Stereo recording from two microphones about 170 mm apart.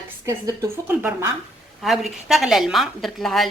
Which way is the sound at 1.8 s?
Centre (ahead or behind).